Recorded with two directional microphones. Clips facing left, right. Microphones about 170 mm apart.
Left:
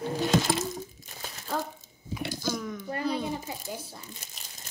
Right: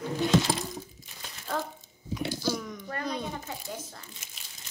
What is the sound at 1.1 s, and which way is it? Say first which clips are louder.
Crumpling: left 4 dB; 40° left (ahead or behind).